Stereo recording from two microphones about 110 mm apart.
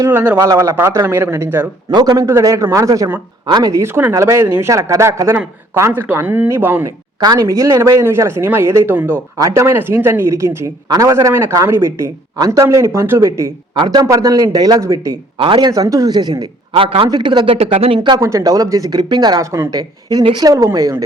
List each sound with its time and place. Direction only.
0.0 s a man's voice: 20° right (ahead or behind)
0.3 s a man's voice: 30° right (ahead or behind)
1.9 s a man's voice: 40° right (ahead or behind); by 6.9 s 20° right (ahead or behind)
7.2 s a man's voice: 35° right (ahead or behind)
13.7 s speech: 35° right (ahead or behind)
15.4 s speech: 50° right (ahead or behind)
15.7 s speech: 35° right (ahead or behind)
16.7 s speech: 55° right (ahead or behind)
17.1 s speech: 45° right (ahead or behind); by 18.0 s 65° right (ahead or behind)
18.2 s speech: 30° right (ahead or behind)